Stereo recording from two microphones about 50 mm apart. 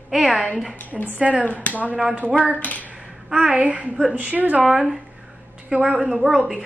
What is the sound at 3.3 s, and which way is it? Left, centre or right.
A woman's voice, centre.